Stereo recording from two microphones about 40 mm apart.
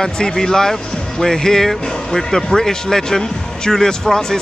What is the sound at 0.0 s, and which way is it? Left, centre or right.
A man's voice, centre.